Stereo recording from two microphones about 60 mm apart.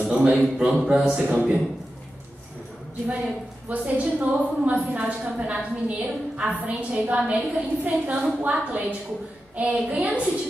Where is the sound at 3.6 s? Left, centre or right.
Right.